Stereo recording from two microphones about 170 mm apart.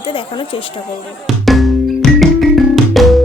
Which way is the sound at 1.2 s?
Centre (ahead or behind).